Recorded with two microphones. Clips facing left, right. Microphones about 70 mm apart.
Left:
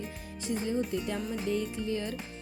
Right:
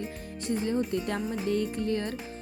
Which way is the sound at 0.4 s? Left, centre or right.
Right.